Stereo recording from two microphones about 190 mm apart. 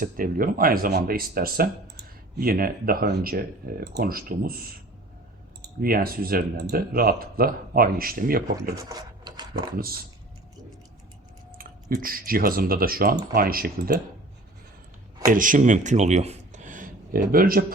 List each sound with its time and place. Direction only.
0.0 s speech: 50° right (ahead or behind)
8.7 s a sound: 20° right (ahead or behind)
9.7 s speech: 50° right (ahead or behind)
11.5 s speech: 50° right (ahead or behind)
15.3 s speech: 45° right (ahead or behind)